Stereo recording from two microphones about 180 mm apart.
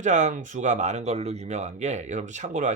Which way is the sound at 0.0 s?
40° right (ahead or behind).